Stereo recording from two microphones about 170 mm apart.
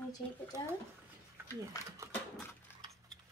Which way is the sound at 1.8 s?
20° left (ahead or behind).